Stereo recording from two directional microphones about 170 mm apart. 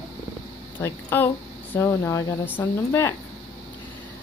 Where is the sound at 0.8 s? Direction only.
15° left (ahead or behind).